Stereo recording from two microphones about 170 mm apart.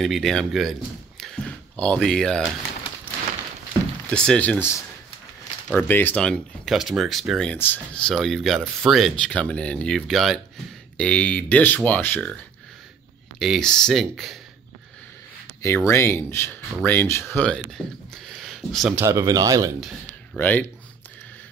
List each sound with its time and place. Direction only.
0.0 s a man's voice: centre (ahead or behind)
4.1 s speech: 5° left (ahead or behind)
13.4 s speech: centre (ahead or behind)
15.9 s speech: 15° left (ahead or behind)
18.9 s speech: 15° right (ahead or behind)
20.3 s speech: 10° left (ahead or behind)